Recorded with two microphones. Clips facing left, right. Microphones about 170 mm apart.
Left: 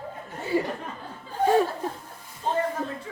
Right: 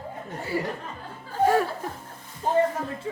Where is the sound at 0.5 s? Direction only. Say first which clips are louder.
Left 3 dB; 20° left (ahead or behind).